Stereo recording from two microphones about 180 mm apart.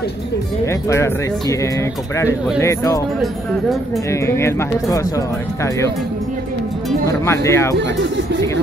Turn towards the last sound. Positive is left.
turn(degrees=15)  # may be behind; listen again after turning